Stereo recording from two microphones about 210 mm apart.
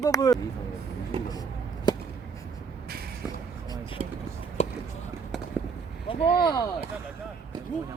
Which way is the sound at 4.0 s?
35° right (ahead or behind).